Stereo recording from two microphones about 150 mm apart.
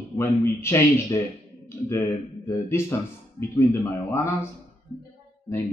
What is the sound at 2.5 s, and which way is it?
Speech, 15° left (ahead or behind).